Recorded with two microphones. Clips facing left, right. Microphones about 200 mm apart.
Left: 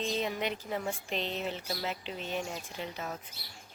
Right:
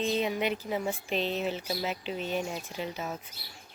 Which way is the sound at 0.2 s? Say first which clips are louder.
Right 4 dB; 10° right (ahead or behind).